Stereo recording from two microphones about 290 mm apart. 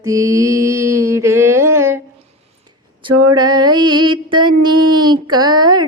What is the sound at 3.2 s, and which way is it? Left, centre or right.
Music, centre.